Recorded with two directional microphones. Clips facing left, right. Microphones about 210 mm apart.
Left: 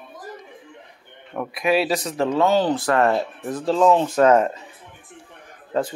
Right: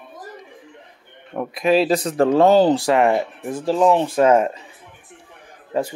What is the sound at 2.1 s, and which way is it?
Speech, 45° right (ahead or behind).